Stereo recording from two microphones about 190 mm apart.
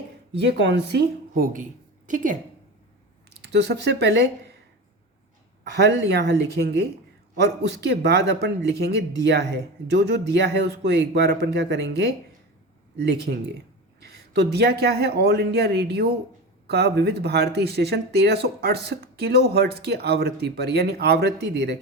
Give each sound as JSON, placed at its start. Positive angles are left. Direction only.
{"t": 0.3, "sound": "speech", "side_deg": -65}
{"t": 1.3, "sound": "a woman's voice", "side_deg": -45}
{"t": 3.4, "sound": "speech", "side_deg": -60}
{"t": 5.7, "sound": "speech", "side_deg": -60}